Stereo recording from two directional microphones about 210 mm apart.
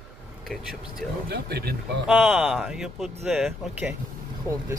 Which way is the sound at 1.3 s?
50° right (ahead or behind).